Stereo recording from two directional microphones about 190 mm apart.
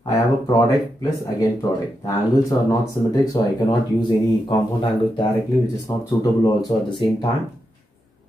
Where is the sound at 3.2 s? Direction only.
20° left (ahead or behind).